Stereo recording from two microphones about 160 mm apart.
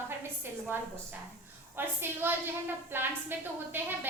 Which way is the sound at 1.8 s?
15° right (ahead or behind).